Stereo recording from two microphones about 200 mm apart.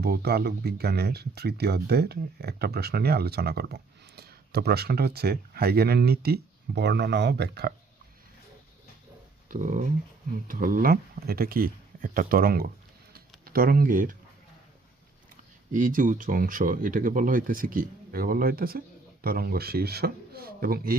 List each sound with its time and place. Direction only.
0.0 s speech: 55° right (ahead or behind)
9.5 s speech: 40° right (ahead or behind)
15.7 s speech: 40° right (ahead or behind)